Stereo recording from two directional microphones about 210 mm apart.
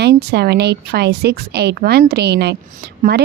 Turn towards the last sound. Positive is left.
turn(degrees=-50)  # may be behind; listen again after turning